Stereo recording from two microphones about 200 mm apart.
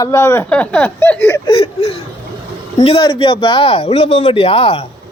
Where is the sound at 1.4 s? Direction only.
25° left (ahead or behind).